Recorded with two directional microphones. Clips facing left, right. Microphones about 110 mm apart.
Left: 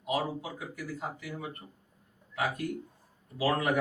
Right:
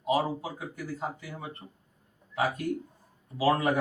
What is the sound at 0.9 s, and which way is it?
Speech, 30° right (ahead or behind).